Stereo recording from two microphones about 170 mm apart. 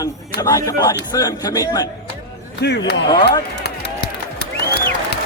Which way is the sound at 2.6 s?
85° left.